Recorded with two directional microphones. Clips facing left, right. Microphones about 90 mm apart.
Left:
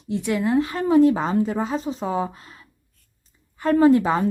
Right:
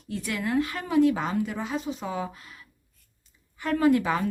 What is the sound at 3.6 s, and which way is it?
Speech, 35° left (ahead or behind).